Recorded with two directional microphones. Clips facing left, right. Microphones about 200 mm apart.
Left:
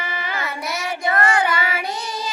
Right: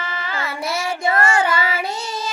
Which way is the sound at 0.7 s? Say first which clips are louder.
Right 2 dB; 25° right (ahead or behind).